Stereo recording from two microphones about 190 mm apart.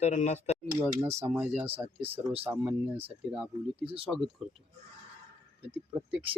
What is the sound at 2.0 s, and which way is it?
Speech, 30° right (ahead or behind).